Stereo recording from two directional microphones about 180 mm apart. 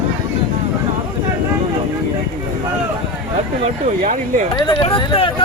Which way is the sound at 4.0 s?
45° right (ahead or behind).